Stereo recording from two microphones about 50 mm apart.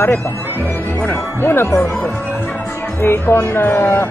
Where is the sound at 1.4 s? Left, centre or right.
Left.